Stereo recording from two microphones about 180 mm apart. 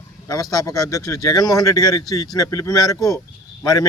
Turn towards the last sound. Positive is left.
turn(degrees=20)  # may be behind; listen again after turning